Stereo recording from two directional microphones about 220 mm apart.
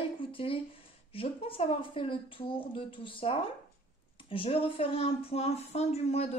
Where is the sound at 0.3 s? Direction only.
25° left (ahead or behind).